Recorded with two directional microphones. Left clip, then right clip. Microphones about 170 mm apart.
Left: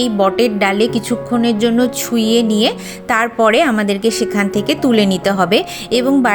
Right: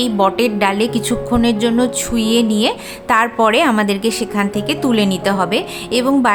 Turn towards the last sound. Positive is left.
turn(degrees=15)  # may be behind; listen again after turning